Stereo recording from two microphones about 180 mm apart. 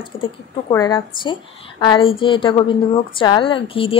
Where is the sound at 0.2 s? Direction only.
20° left (ahead or behind).